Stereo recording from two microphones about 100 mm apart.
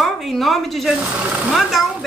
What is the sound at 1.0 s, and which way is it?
Speech, 15° right (ahead or behind).